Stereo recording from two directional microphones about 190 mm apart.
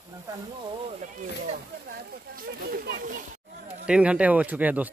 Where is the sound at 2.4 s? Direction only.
50° right (ahead or behind).